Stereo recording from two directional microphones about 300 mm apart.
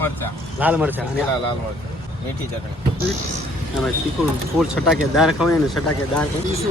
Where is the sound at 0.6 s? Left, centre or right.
Centre.